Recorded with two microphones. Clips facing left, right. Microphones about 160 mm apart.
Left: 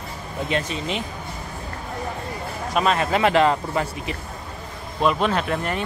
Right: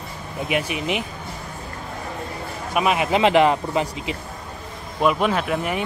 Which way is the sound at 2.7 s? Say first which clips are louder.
Right 1 dB; 10° right (ahead or behind).